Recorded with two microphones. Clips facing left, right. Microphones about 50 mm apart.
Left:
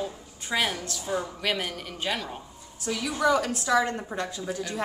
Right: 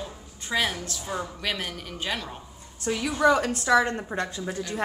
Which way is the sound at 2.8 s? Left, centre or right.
Right.